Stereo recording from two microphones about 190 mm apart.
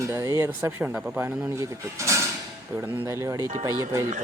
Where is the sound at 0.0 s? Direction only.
15° right (ahead or behind).